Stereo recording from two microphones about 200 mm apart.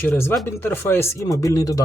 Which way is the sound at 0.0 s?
10° left (ahead or behind).